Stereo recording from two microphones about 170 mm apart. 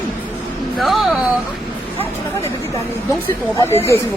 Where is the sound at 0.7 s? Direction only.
Centre (ahead or behind).